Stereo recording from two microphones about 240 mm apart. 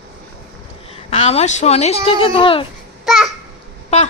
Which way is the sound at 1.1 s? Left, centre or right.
Left.